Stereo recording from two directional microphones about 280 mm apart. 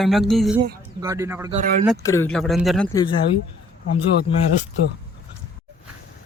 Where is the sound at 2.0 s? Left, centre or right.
Centre.